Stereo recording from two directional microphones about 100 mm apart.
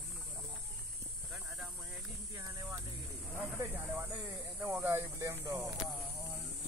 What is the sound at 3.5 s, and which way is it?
Snake, 25° right (ahead or behind).